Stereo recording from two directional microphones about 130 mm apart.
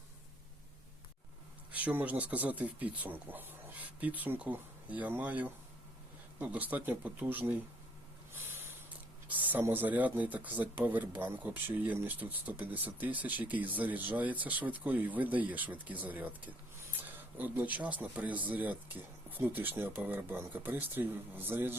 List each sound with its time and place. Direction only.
1.7 s speech: 10° right (ahead or behind)
8.3 s a sound: 15° right (ahead or behind)
9.2 s speech: 15° right (ahead or behind)